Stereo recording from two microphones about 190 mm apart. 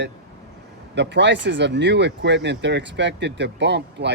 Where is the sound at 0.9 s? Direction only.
70° right (ahead or behind).